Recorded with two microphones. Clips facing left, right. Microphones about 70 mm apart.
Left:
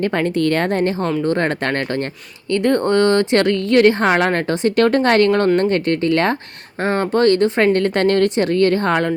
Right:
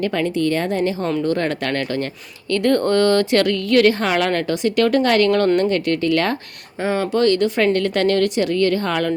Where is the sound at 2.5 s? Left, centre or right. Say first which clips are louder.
Left 1 dB; left.